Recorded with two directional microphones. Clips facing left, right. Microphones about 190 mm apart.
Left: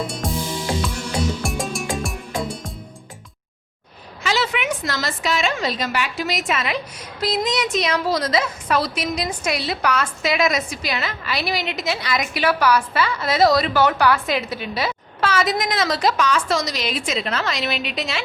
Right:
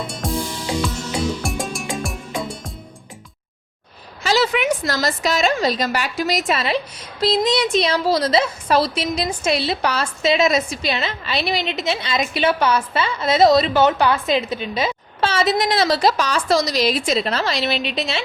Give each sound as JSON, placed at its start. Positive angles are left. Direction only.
{"t": 0.0, "sound": "music", "side_deg": 0}
{"t": 1.4, "sound": "music", "side_deg": 0}
{"t": 4.2, "sound": "a woman's voice", "side_deg": -40}